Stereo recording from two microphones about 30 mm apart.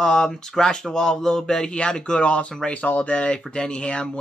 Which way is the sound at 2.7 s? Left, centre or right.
Left.